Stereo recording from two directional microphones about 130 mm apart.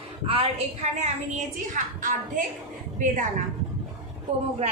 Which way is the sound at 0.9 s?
65° right (ahead or behind).